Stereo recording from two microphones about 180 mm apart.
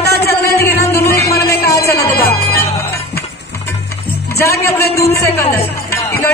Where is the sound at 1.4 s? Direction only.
15° left (ahead or behind).